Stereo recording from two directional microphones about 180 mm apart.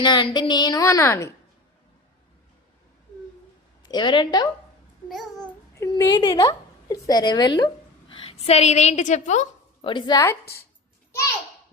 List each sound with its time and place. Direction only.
0.0 s a woman's voice: 25° left (ahead or behind)
3.8 s a woman's voice: 25° left (ahead or behind)
5.0 s babbling: centre (ahead or behind)
5.7 s a woman's voice: 20° left (ahead or behind); by 9.9 s 40° left (ahead or behind)
9.9 s a woman's voice: 20° left (ahead or behind)
10.4 s speech: 60° left (ahead or behind)